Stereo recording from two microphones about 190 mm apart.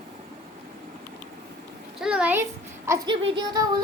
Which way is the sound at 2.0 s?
5° right (ahead or behind).